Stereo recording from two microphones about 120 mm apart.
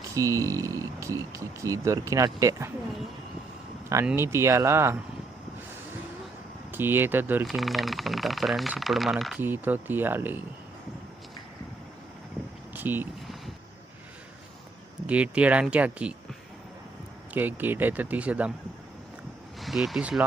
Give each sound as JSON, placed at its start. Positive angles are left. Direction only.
{"t": 0.1, "sound": "speech", "side_deg": -25}
{"t": 4.0, "sound": "speech", "side_deg": -20}
{"t": 6.7, "sound": "speech", "side_deg": -20}
{"t": 7.4, "sound": "speech", "side_deg": 0}
{"t": 9.4, "sound": "speech", "side_deg": -15}
{"t": 12.7, "sound": "vehicle", "side_deg": -15}
{"t": 15.0, "sound": "speech", "side_deg": -10}
{"t": 17.3, "sound": "speech", "side_deg": -15}
{"t": 19.6, "sound": "speech", "side_deg": 0}